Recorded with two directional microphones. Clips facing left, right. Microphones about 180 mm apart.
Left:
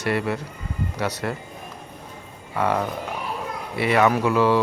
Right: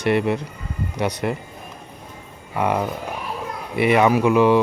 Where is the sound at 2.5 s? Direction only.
15° right (ahead or behind).